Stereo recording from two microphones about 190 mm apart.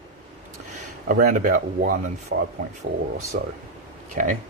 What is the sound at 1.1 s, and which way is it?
Speech, 50° right (ahead or behind).